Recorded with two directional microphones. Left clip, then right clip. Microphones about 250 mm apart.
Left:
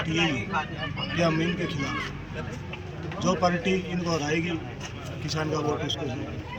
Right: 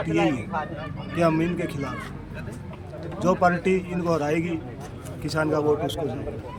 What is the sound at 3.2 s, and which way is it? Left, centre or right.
A man's voice, centre.